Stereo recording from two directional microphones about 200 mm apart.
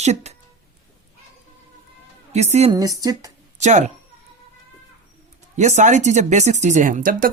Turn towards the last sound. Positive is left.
turn(degrees=-45)  # may be behind; listen again after turning